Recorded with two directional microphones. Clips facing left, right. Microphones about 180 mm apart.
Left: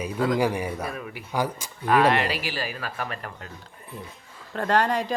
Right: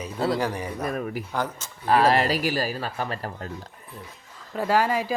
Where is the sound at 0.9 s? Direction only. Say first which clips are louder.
Right 6 dB; 45° right (ahead or behind).